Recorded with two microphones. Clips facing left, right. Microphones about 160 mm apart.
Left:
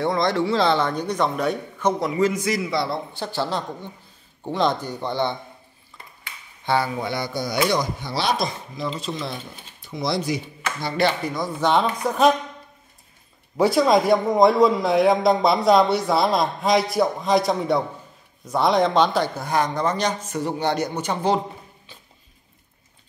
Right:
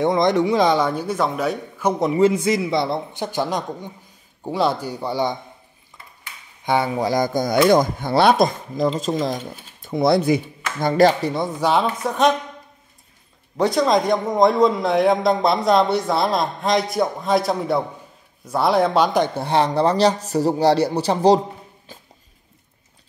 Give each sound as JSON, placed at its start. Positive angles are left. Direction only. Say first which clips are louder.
{"t": 0.0, "sound": "speech", "louder": "right 4 dB", "side_deg": -20}
{"t": 2.0, "sound": "a man's voice", "louder": "right 5 dB", "side_deg": -25}
{"t": 6.6, "sound": "a man's voice", "louder": "right 2 dB", "side_deg": -20}
{"t": 7.0, "sound": "speech", "louder": "right 7 dB", "side_deg": -40}
{"t": 11.6, "sound": "a man's voice", "louder": "even", "side_deg": -5}
{"t": 13.6, "sound": "a man's voice", "louder": "even", "side_deg": 5}
{"t": 19.3, "sound": "speech", "louder": "right 4 dB", "side_deg": -30}